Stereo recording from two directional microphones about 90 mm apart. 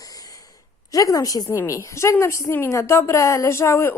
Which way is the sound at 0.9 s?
40° left (ahead or behind).